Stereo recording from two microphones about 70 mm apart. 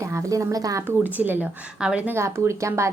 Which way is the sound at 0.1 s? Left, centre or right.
Right.